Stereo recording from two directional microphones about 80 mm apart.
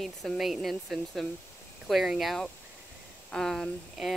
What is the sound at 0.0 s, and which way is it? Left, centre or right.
Speech, centre.